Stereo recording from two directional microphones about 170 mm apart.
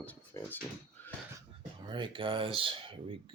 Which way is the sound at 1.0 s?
10° left (ahead or behind).